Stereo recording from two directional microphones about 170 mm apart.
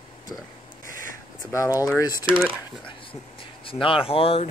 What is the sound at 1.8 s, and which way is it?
Speech, 20° left (ahead or behind).